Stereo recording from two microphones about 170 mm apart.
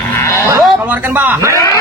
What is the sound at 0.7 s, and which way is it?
Speech, 10° right (ahead or behind).